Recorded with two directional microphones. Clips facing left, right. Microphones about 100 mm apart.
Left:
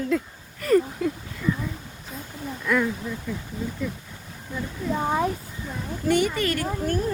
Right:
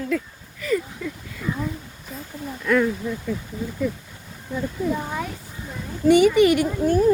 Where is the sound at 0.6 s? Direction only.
50° left (ahead or behind).